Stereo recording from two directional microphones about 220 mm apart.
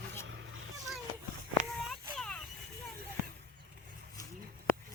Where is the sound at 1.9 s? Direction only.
5° left (ahead or behind).